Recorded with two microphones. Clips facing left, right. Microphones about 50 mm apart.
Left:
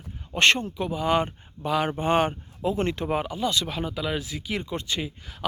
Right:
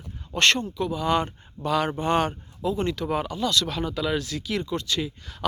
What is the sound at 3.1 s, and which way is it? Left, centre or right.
Speech, centre.